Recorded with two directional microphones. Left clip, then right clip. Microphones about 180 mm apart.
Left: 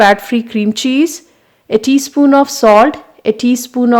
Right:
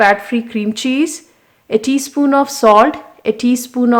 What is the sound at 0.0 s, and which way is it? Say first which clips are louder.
Speech: left 3 dB; 40° left (ahead or behind).